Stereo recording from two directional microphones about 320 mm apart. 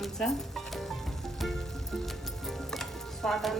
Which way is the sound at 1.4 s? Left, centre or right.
Centre.